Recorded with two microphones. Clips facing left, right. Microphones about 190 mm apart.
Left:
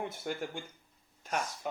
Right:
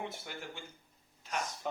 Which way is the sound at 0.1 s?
50° left (ahead or behind).